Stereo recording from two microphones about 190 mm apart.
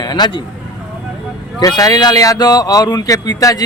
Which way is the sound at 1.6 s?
20° left (ahead or behind).